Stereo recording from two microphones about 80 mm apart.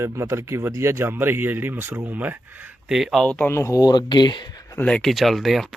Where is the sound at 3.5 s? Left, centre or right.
Left.